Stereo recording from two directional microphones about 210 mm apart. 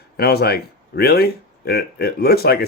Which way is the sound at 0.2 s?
50° left (ahead or behind).